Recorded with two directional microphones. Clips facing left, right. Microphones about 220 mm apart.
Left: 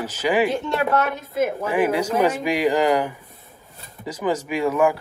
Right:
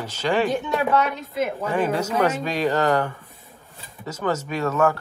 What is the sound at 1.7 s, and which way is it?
A man's voice, 10° left (ahead or behind).